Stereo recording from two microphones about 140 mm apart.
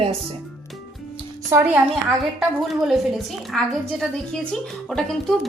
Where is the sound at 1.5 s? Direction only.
20° right (ahead or behind).